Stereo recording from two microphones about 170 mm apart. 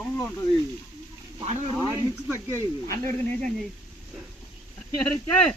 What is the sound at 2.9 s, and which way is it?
Speech, 50° right (ahead or behind).